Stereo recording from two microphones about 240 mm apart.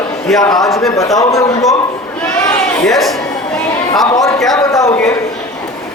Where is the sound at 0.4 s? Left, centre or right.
Centre.